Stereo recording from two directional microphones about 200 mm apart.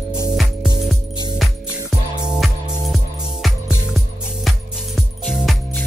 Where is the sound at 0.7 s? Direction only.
20° left (ahead or behind).